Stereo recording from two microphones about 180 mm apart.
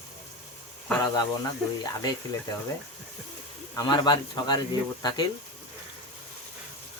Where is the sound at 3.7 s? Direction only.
20° left (ahead or behind).